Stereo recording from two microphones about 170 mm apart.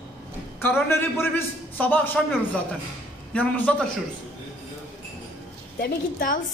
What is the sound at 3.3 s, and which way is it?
Speech, 5° left (ahead or behind).